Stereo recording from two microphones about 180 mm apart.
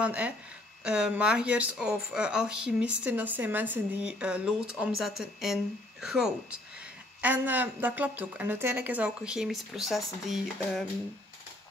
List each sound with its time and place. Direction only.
0.0 s a woman's voice: 10° right (ahead or behind)